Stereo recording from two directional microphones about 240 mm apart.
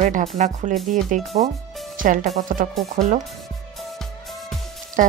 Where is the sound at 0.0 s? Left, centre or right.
Right.